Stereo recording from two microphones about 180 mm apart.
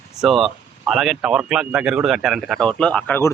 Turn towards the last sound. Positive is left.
turn(degrees=10)  # may be behind; listen again after turning